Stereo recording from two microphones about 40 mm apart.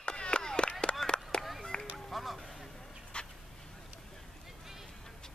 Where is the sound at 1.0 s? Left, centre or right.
Centre.